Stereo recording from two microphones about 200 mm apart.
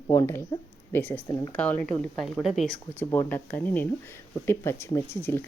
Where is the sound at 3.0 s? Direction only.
10° left (ahead or behind).